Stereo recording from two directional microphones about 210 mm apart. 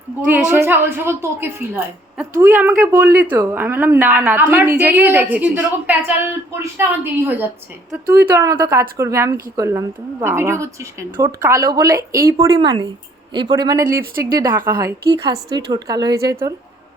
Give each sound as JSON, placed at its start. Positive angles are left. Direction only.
{"t": 0.5, "sound": "a woman's voice", "side_deg": -10}